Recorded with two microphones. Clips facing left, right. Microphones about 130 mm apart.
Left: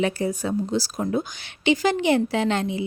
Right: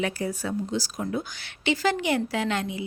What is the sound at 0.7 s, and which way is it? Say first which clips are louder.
Speech: left 5 dB; 30° left (ahead or behind).